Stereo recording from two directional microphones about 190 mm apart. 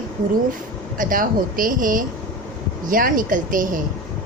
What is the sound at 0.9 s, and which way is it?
A woman's voice, 45° right (ahead or behind).